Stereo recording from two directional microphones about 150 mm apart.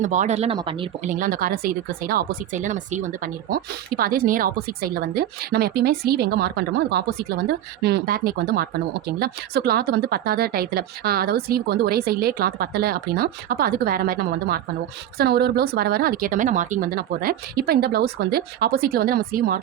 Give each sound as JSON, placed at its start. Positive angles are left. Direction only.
{"t": 0.0, "sound": "speech", "side_deg": -55}
{"t": 0.5, "sound": "speech", "side_deg": -35}
{"t": 1.0, "sound": "speech", "side_deg": -60}
{"t": 3.5, "sound": "speech", "side_deg": -80}